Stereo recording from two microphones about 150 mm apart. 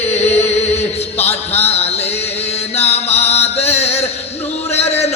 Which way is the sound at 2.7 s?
45° left (ahead or behind).